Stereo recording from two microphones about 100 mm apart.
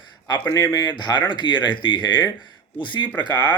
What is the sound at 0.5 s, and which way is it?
A man's voice, 40° left (ahead or behind).